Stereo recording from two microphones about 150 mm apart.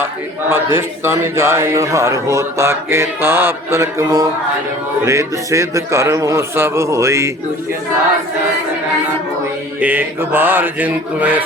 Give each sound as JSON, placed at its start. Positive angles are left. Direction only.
{"t": 0.0, "sound": "speech", "side_deg": -15}
{"t": 9.8, "sound": "mantra", "side_deg": -10}